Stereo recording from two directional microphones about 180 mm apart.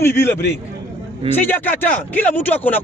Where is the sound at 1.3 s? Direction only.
10° left (ahead or behind).